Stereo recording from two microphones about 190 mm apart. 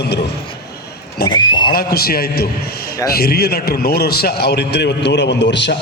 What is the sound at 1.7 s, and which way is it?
A man's voice, 55° left (ahead or behind).